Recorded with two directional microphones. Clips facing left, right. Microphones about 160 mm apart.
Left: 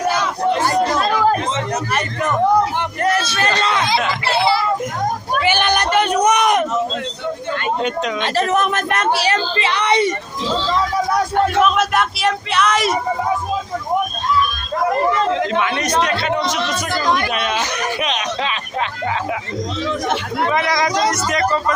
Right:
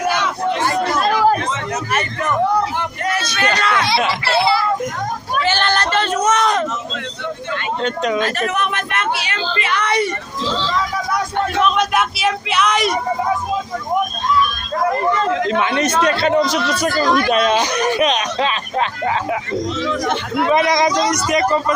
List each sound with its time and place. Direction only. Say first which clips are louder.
0.9 s chatter: right 1 dB; centre (ahead or behind)
3.0 s music: left 5 dB; 45° left (ahead or behind)
3.3 s a sound: even; 30° left (ahead or behind)
5.4 s a sound: even; 15° left (ahead or behind)
8.2 s speech: left 2 dB; 35° left (ahead or behind)
9.6 s speech: left 2 dB; 20° left (ahead or behind)
11.3 s speech: left 1 dB; 5° left (ahead or behind)
15.5 s speech: right 1 dB; 25° right (ahead or behind)
20.5 s speech: right 4 dB; 20° right (ahead or behind)